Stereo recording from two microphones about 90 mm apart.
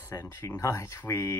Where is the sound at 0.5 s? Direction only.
35° left (ahead or behind).